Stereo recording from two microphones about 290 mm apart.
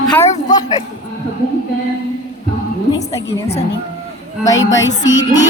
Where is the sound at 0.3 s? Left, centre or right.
Left.